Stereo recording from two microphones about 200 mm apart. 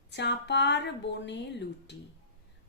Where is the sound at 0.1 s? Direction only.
60° left (ahead or behind).